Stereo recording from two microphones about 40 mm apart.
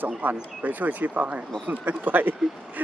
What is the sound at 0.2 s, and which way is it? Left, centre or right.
Speech, right.